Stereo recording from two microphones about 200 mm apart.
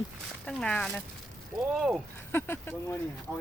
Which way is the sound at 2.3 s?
10° left (ahead or behind).